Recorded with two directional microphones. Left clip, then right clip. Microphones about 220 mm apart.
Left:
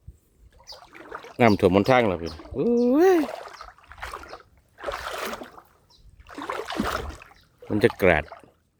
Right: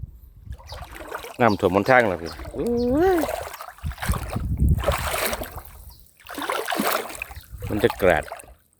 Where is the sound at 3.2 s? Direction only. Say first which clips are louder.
Right 5 dB; 50° right (ahead or behind).